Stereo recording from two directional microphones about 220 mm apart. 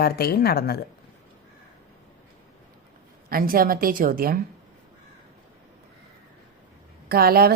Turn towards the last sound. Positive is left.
turn(degrees=-45)  # may be behind; listen again after turning